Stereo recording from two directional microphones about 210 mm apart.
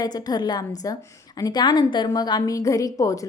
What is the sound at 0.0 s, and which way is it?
A woman's voice, 20° left (ahead or behind).